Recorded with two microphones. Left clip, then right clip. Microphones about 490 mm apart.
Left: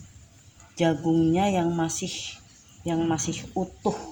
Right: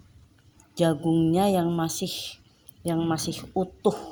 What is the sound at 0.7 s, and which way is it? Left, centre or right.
Speech, right.